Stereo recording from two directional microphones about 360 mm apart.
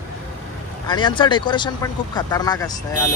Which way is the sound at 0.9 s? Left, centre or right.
Centre.